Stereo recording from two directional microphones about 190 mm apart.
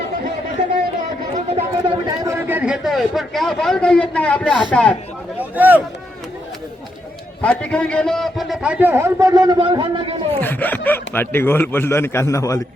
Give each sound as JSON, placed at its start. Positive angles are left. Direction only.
{"t": 1.5, "sound": "speech", "side_deg": -35}
{"t": 2.0, "sound": "a man's voice", "side_deg": -15}
{"t": 5.4, "sound": "a sound", "side_deg": -10}
{"t": 7.4, "sound": "a man's voice", "side_deg": 5}
{"t": 10.4, "sound": "a man's voice", "side_deg": 10}